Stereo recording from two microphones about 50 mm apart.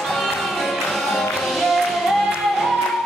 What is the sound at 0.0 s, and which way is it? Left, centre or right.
Music, centre.